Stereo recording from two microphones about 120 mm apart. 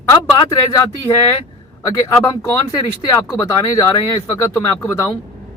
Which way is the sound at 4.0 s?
45° left (ahead or behind).